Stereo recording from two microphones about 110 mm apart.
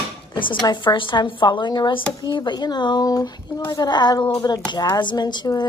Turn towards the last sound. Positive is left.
turn(degrees=40)  # may be behind; listen again after turning